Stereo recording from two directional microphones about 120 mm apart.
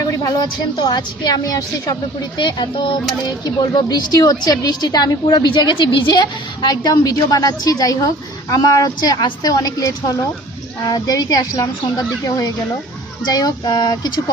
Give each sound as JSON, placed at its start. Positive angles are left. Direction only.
{"t": 0.2, "sound": "a woman's voice", "side_deg": 35}
{"t": 2.4, "sound": "a woman's voice", "side_deg": 40}